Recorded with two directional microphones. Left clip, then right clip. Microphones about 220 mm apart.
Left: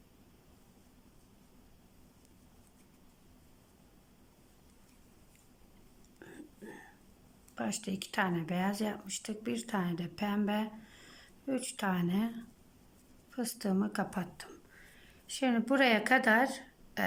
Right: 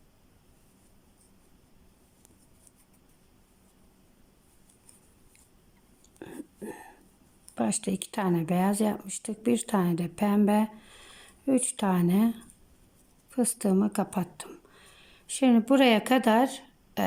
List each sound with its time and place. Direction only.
6.1 s whispering: 20° right (ahead or behind)
7.5 s speech: 20° right (ahead or behind)